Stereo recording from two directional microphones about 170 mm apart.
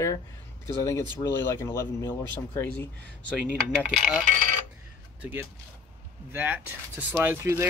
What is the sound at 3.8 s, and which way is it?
Speech, 5° right (ahead or behind).